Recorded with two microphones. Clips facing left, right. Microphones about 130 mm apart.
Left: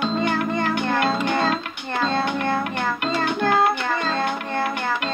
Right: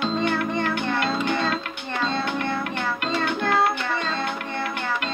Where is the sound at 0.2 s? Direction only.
40° left (ahead or behind).